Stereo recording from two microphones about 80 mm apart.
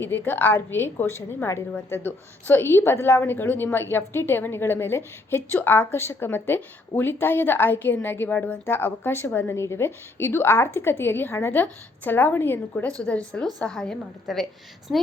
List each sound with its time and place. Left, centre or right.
0.0 s a woman's voice: left; by 14.4 s centre